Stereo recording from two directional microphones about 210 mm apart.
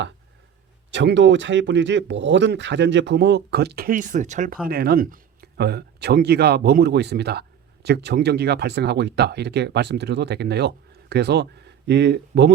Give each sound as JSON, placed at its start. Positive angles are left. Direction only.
{"t": 0.9, "sound": "speech", "side_deg": -60}